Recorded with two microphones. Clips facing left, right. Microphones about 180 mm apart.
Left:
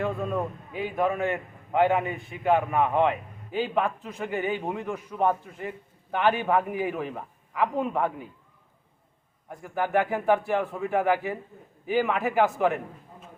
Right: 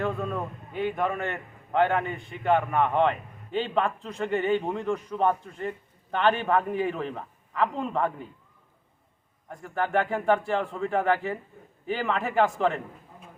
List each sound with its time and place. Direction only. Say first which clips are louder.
0.0 s a man's voice: left 1 dB; 5° left (ahead or behind)
9.5 s a man's voice: left 1 dB; 5° left (ahead or behind)